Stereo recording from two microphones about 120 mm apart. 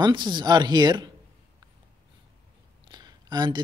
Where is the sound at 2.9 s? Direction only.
35° right (ahead or behind).